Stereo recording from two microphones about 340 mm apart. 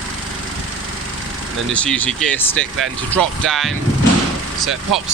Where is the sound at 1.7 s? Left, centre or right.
Centre.